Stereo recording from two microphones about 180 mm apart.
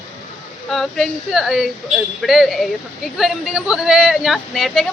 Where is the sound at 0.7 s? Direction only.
Centre (ahead or behind).